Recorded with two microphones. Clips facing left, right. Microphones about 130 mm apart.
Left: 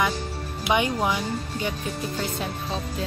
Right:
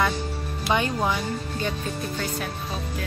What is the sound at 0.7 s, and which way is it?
Speech, 15° left (ahead or behind).